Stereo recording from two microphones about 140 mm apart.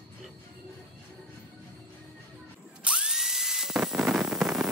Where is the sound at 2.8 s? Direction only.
5° right (ahead or behind).